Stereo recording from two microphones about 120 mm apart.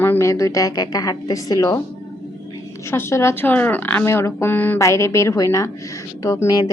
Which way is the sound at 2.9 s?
20° left (ahead or behind).